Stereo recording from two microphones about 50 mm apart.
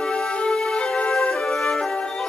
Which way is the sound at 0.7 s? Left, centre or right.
Left.